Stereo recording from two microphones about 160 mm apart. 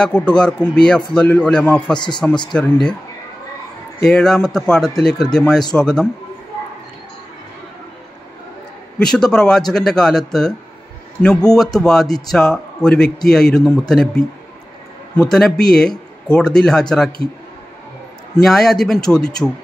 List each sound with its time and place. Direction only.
0.0 s a man's voice: 5° left (ahead or behind)
2.0 s speech: 30° left (ahead or behind)
2.5 s a man's voice: 5° left (ahead or behind)
4.0 s a man's voice: 5° left (ahead or behind)
9.0 s a man's voice: 5° left (ahead or behind)
15.3 s a man's voice: 5° left (ahead or behind)
18.3 s a man's voice: centre (ahead or behind)